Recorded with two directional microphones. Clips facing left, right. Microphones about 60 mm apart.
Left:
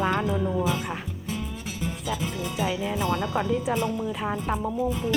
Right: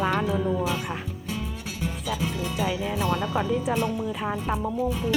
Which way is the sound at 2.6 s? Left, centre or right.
Centre.